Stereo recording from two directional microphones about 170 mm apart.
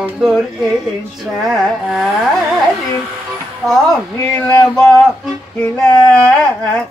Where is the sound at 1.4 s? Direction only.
5° right (ahead or behind).